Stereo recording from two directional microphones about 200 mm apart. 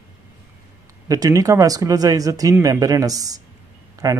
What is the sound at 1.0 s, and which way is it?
Speech, 20° right (ahead or behind).